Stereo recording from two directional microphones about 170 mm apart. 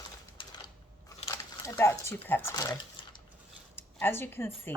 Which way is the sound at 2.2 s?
10° left (ahead or behind).